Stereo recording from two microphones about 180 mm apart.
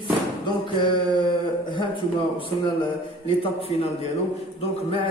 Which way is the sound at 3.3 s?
30° left (ahead or behind).